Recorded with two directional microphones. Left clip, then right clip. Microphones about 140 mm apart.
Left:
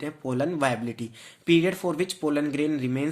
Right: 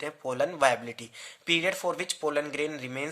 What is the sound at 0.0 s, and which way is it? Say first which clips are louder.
Speech: left 1 dB; 20° right (ahead or behind).